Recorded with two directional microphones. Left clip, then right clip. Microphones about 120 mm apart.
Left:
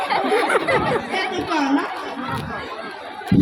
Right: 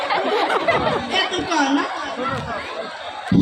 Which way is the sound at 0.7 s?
35° right (ahead or behind).